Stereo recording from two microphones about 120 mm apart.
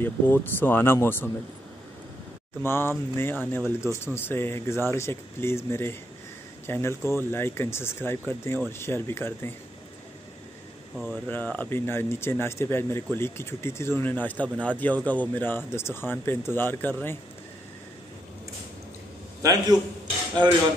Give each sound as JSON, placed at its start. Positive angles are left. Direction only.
{"t": 0.0, "sound": "speech", "side_deg": 15}
{"t": 2.6, "sound": "speech", "side_deg": 20}
{"t": 11.2, "sound": "speech", "side_deg": 15}
{"t": 20.4, "sound": "speech", "side_deg": -40}